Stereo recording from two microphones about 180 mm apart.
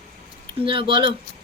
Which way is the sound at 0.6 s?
30° right (ahead or behind).